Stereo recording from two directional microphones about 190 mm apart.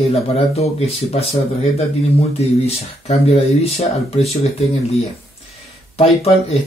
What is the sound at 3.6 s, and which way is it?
Speech, 35° left (ahead or behind).